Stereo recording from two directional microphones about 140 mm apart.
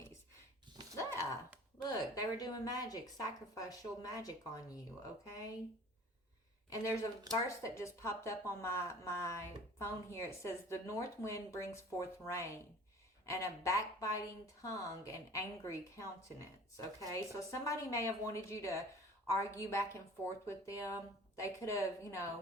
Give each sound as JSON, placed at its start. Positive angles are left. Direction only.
{"t": 0.9, "sound": "dog", "side_deg": 20}
{"t": 1.9, "sound": "speech", "side_deg": 25}
{"t": 6.7, "sound": "speech", "side_deg": 25}
{"t": 17.1, "sound": "speech", "side_deg": 20}